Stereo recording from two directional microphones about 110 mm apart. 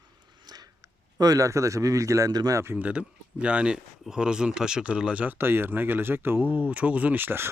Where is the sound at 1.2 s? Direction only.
30° right (ahead or behind).